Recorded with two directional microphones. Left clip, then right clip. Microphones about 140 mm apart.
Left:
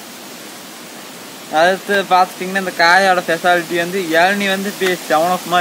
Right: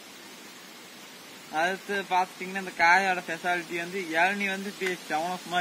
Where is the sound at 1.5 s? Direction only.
15° left (ahead or behind).